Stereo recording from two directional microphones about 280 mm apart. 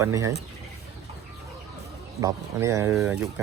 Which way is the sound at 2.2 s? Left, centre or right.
Centre.